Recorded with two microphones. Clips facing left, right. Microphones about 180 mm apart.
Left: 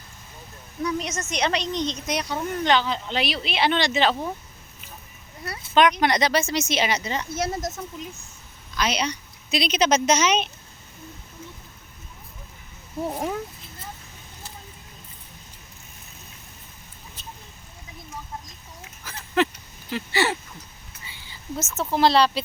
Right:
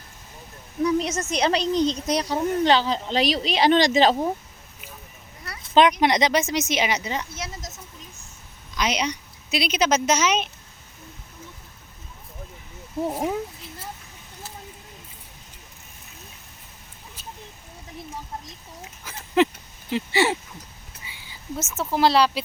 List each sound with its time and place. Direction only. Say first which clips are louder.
0.8 s speech: right 5 dB; 30° right (ahead or behind)
1.6 s speech: right 6 dB; 5° right (ahead or behind)
2.0 s speech: right 4 dB; 35° right (ahead or behind)
6.0 s speech: right 1 dB; 20° right (ahead or behind)
7.3 s speech: left 9 dB; 60° left (ahead or behind)
8.7 s a woman's voice: even; 15° right (ahead or behind)
13.1 s speech: right 2 dB; 5° right (ahead or behind)
19.1 s a sound: left 1 dB; 20° right (ahead or behind)
19.9 s speech: right 3 dB; 25° right (ahead or behind)
21.1 s speech: even; 10° right (ahead or behind)